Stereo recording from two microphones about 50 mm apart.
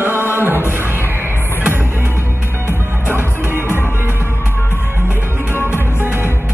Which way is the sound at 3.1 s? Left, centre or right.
Right.